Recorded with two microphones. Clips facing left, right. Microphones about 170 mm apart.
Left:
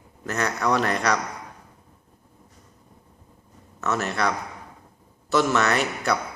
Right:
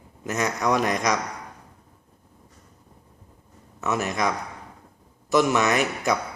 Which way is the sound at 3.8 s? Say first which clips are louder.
Even; 15° right (ahead or behind).